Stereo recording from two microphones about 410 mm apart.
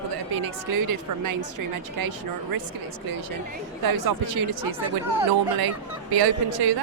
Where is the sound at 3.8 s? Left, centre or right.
Right.